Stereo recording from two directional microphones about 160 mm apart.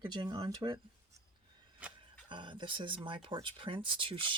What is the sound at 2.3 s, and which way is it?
Speech, 30° right (ahead or behind).